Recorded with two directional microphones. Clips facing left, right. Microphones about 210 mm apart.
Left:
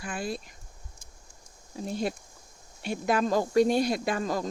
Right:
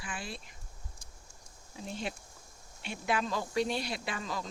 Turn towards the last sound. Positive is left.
turn(degrees=45)  # may be behind; listen again after turning